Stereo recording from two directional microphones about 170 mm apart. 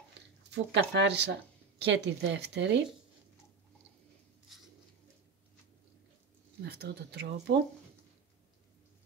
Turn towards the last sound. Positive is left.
turn(degrees=-75)  # may be behind; listen again after turning